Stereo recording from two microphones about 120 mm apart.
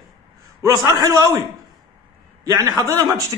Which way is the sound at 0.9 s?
30° right (ahead or behind).